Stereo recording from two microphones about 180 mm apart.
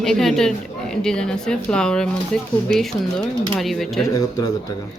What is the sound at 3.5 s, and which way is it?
Speech, centre (ahead or behind).